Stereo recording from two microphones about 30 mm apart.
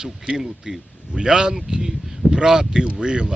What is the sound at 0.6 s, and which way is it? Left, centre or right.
Speech, right.